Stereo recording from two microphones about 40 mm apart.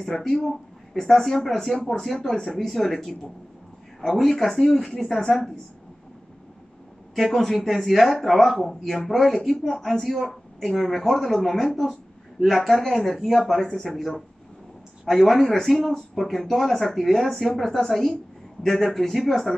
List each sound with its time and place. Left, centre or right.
0.0 s speech: centre
2.1 s speech: left
7.2 s a woman's voice: centre